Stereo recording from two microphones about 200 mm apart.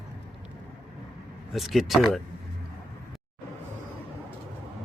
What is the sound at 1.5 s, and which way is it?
Speech, centre (ahead or behind).